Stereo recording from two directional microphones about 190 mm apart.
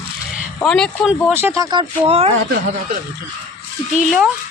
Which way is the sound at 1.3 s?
15° right (ahead or behind).